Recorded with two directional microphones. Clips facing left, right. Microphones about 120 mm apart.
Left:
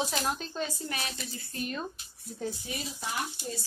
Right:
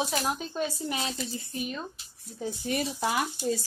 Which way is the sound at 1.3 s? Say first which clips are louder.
Right 6 dB; 20° right (ahead or behind).